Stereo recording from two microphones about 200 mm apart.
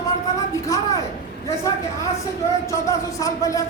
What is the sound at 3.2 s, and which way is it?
Speech, 15° left (ahead or behind).